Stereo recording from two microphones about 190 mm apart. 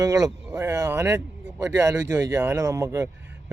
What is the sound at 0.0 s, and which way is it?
Speech, 15° right (ahead or behind).